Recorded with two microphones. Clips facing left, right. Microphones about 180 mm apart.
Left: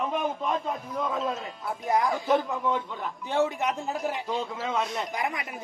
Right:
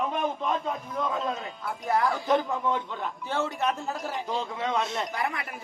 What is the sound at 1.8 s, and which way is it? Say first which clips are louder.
Speech: even; 15° left (ahead or behind).